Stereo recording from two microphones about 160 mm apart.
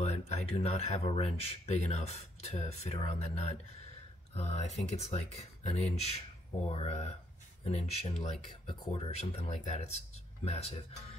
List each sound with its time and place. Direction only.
0.0 s speech: 45° left (ahead or behind)